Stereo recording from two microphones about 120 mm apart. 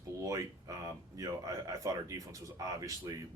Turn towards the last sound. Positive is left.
turn(degrees=-30)  # may be behind; listen again after turning